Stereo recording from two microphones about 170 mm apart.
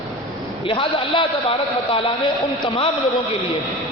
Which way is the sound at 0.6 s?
35° left (ahead or behind).